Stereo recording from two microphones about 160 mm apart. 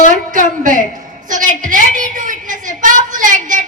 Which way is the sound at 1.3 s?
55° right (ahead or behind).